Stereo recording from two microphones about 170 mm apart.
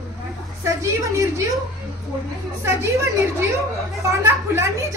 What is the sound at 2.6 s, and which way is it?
Speech, 15° right (ahead or behind).